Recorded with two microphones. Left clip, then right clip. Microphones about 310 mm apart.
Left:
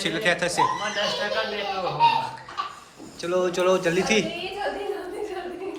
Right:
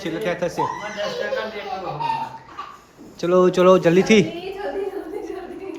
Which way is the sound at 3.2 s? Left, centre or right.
Right.